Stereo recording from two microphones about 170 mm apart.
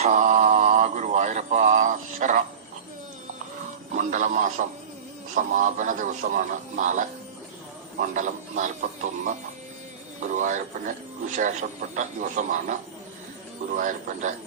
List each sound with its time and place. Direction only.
0.0 s mantra: 45° right (ahead or behind)
3.9 s speech: 50° right (ahead or behind)
8.1 s speech: 50° right (ahead or behind)
13.7 s speech: 45° right (ahead or behind)